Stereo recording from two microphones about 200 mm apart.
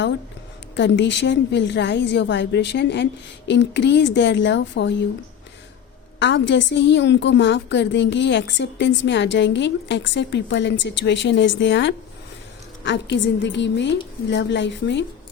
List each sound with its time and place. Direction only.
0.8 s a woman's voice: 60° left (ahead or behind)
6.1 s a woman's voice: 65° left (ahead or behind)